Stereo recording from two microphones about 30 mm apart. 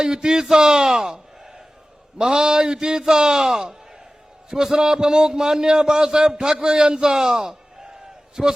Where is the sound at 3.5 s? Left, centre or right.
Centre.